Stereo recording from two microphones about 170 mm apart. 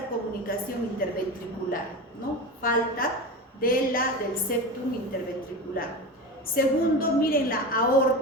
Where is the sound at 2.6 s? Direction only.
55° left (ahead or behind).